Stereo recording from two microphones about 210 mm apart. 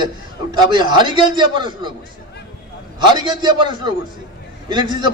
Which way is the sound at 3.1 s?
20° right (ahead or behind).